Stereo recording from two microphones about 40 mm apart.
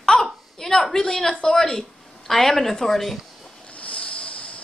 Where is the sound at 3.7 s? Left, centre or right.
Left.